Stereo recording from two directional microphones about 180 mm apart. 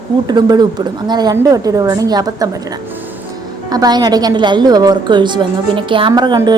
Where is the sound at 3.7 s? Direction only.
20° right (ahead or behind).